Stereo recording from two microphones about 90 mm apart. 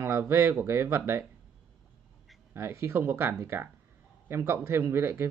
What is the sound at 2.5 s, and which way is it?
Speech, 30° right (ahead or behind).